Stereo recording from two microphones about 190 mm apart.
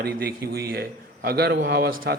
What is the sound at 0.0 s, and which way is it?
A man's voice, 55° right (ahead or behind).